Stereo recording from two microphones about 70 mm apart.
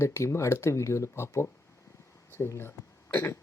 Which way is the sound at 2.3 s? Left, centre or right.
Left.